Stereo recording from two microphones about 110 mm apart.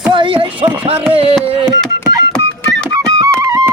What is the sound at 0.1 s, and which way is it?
Speech, 50° right (ahead or behind).